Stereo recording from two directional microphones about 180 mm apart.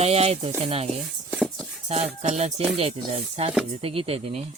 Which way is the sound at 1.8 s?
35° right (ahead or behind).